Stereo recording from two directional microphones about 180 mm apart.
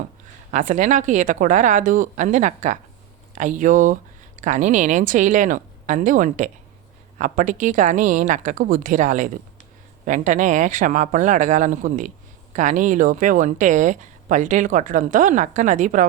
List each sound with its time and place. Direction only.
0.5 s speech: 45° right (ahead or behind)